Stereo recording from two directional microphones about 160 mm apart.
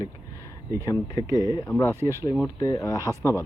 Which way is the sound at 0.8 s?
20° left (ahead or behind).